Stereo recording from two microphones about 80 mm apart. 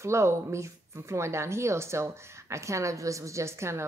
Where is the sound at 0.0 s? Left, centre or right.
Right.